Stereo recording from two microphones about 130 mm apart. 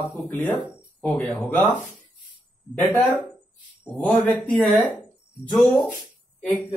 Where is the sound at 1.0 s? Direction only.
5° left (ahead or behind).